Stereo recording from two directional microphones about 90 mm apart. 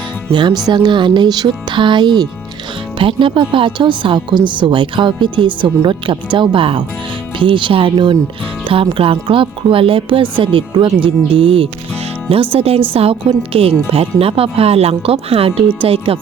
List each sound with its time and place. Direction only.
0.3 s speech: 60° right (ahead or behind)
3.0 s speech: 75° right (ahead or behind); by 16.1 s 90° right